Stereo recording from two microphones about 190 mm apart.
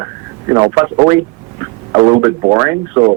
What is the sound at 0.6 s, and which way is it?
A man's voice, 20° right (ahead or behind).